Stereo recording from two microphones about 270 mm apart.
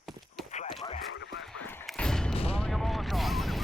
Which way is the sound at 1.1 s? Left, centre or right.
Left.